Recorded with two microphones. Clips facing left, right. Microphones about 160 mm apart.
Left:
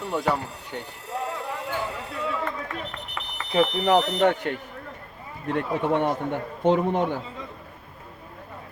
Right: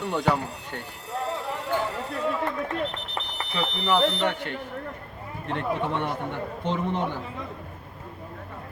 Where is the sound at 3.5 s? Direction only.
45° left (ahead or behind).